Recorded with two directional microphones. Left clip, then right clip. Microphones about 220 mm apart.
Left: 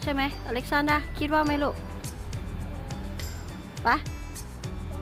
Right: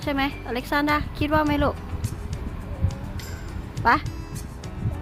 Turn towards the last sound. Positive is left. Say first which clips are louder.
# right 5 dB
turn(degrees=-10)  # may be behind; listen again after turning